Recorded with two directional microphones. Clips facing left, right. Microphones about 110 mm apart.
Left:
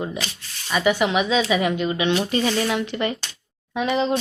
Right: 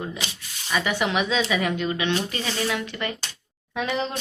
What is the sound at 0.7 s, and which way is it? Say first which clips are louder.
A woman's voice: left 4 dB; 5° left (ahead or behind).